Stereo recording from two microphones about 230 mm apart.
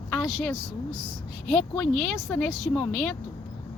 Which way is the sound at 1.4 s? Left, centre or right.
Centre.